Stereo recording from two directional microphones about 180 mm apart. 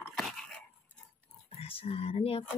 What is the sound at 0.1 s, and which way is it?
Dog, centre (ahead or behind).